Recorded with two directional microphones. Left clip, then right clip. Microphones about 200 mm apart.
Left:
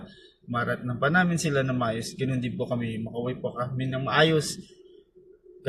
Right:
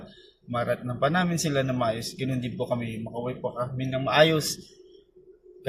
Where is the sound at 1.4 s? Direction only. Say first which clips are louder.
Even; centre (ahead or behind).